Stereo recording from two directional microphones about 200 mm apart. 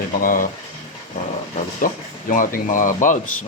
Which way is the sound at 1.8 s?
45° left (ahead or behind).